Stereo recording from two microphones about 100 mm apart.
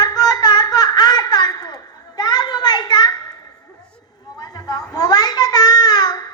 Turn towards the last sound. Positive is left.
turn(degrees=45)  # may be behind; listen again after turning